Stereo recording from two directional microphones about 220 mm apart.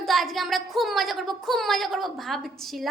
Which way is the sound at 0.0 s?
Centre (ahead or behind).